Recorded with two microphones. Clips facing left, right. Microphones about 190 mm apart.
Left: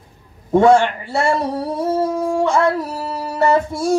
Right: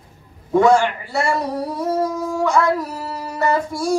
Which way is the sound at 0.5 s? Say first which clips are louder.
Left 2 dB; 25° left (ahead or behind).